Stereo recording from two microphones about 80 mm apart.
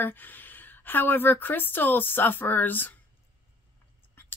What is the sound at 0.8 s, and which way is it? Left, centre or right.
Speech, left.